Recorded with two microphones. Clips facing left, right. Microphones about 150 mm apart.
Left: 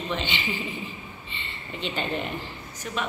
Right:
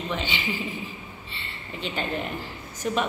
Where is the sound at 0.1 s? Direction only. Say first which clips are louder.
Left 1 dB; 10° right (ahead or behind).